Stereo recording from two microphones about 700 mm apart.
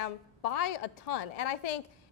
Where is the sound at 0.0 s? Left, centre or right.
Left.